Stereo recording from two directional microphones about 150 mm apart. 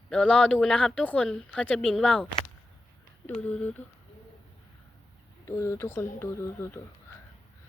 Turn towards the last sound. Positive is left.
turn(degrees=20)  # may be behind; listen again after turning